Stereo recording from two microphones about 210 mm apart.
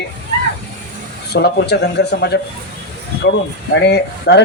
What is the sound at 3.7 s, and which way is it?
Speech, 55° left (ahead or behind).